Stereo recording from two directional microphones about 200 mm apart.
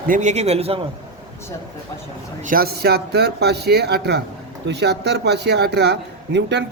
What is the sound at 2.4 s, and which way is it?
A man's voice, 45° right (ahead or behind).